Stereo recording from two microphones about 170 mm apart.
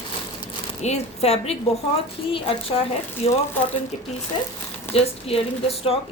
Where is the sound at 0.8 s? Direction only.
40° left (ahead or behind).